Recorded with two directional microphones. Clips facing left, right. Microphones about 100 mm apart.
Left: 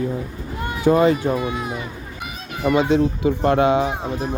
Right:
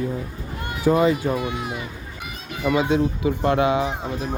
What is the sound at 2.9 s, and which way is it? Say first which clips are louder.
Speech: left 3 dB; 35° left (ahead or behind).